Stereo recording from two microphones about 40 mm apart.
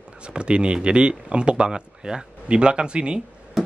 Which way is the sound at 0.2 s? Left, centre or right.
Right.